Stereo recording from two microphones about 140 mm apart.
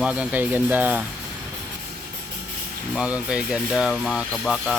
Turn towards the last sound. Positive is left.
turn(degrees=0)  # may be behind; listen again after turning